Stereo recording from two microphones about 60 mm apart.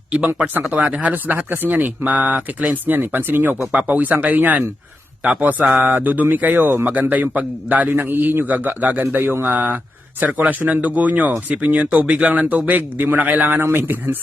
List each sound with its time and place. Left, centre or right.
0.7 s speech: right
5.2 s mantra: centre
5.7 s speech: right